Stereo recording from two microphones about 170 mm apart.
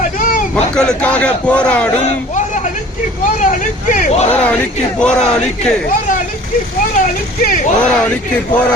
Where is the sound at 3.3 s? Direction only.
50° left (ahead or behind).